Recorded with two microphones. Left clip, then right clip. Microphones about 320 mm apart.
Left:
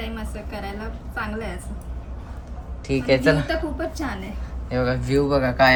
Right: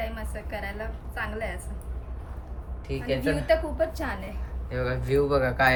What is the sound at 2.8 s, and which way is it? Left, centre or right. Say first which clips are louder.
Speech: left 9 dB; centre.